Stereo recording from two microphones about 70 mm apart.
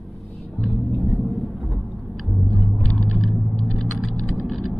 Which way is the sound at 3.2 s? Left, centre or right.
Centre.